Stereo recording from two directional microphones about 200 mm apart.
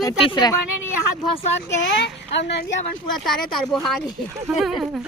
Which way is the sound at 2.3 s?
55° left (ahead or behind).